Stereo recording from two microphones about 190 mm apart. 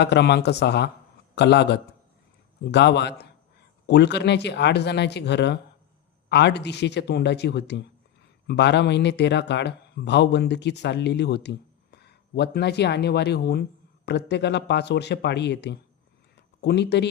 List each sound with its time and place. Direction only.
0.0 s speech: 60° left (ahead or behind)